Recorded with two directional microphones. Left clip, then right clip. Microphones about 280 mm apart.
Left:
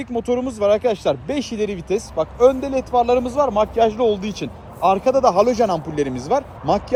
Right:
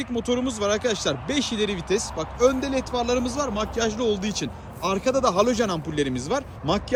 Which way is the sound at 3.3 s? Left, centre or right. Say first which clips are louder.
Left 9 dB; right.